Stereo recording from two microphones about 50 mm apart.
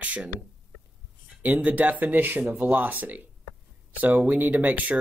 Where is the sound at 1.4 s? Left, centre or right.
Right.